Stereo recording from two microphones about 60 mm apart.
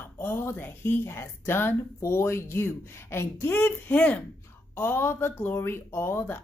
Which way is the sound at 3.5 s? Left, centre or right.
Left.